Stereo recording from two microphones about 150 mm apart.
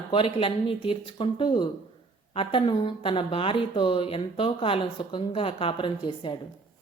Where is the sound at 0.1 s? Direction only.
40° left (ahead or behind).